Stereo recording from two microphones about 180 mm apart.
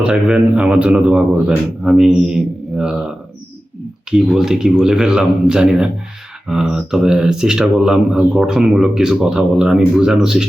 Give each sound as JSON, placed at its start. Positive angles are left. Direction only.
{"t": 0.0, "sound": "speech", "side_deg": -5}